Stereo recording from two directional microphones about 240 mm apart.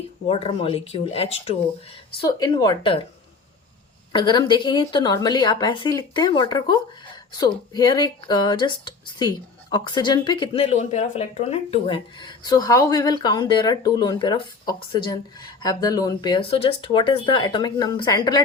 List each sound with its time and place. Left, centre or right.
0.3 s a woman's voice: left
4.1 s a woman's voice: centre